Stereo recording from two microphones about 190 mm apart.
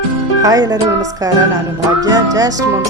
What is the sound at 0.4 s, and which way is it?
Music, 20° right (ahead or behind).